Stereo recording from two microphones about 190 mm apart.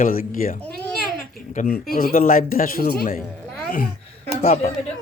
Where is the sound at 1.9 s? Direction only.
50° left (ahead or behind).